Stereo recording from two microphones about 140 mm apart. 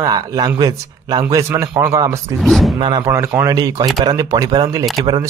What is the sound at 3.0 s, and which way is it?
Speech, 20° right (ahead or behind).